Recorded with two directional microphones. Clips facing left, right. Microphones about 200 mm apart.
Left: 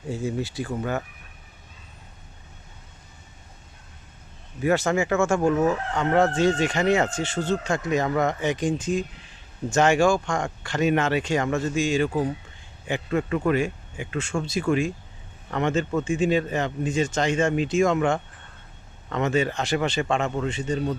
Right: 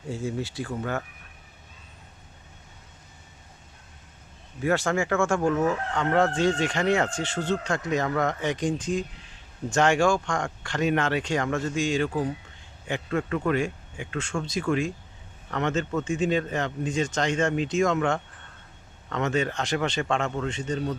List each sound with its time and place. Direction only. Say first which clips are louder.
0.1 s speech: left 2 dB; 15° left (ahead or behind)
4.6 s speech: left 3 dB; 20° left (ahead or behind)
4.9 s speech: left 2 dB; 5° left (ahead or behind)